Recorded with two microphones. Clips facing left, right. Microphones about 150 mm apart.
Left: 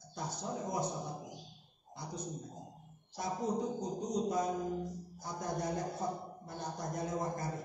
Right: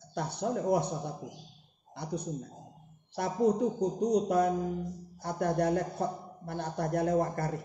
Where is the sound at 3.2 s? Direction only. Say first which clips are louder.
Right 8 dB; 65° right (ahead or behind).